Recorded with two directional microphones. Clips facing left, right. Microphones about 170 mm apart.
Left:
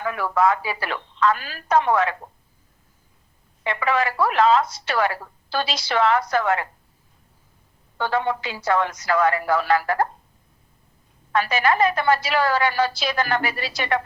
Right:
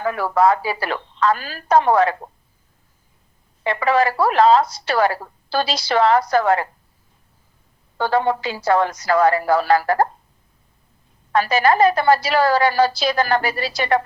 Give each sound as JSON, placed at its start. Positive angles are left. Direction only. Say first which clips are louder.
{"t": 0.0, "sound": "speech", "louder": "right 4 dB", "side_deg": -35}
{"t": 3.6, "sound": "speech", "louder": "right 5 dB", "side_deg": -35}
{"t": 7.9, "sound": "speech", "louder": "right 4 dB", "side_deg": -35}
{"t": 11.3, "sound": "speech", "louder": "right 4 dB", "side_deg": -35}